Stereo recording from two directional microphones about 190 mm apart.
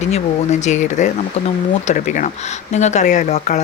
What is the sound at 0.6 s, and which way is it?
Speech, 40° left (ahead or behind).